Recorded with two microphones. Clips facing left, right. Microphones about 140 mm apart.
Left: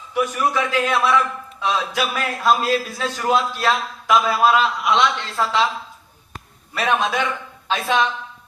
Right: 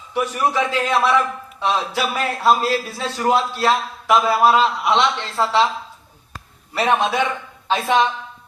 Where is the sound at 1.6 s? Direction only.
30° right (ahead or behind).